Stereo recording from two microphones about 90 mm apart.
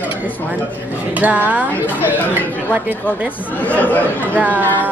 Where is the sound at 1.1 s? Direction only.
15° right (ahead or behind).